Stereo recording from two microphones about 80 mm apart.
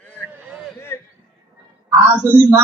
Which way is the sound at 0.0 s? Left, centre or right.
Centre.